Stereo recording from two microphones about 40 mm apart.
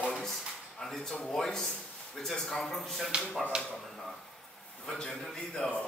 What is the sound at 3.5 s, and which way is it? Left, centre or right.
Speech, right.